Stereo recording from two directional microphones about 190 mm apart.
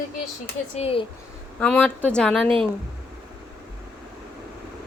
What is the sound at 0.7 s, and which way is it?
Speech, 30° left (ahead or behind).